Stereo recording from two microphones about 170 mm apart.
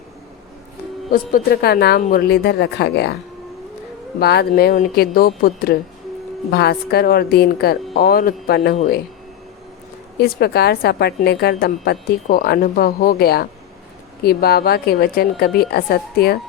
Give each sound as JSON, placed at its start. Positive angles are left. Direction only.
{"t": 1.1, "sound": "a woman's voice", "side_deg": 60}
{"t": 4.2, "sound": "a woman's voice", "side_deg": 70}
{"t": 6.5, "sound": "a woman's voice", "side_deg": 70}
{"t": 10.2, "sound": "a woman's voice", "side_deg": 70}